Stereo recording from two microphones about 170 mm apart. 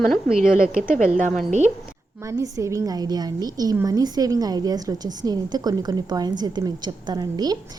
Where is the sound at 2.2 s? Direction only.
20° right (ahead or behind).